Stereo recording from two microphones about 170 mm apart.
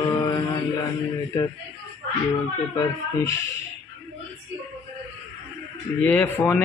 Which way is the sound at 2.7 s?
15° left (ahead or behind).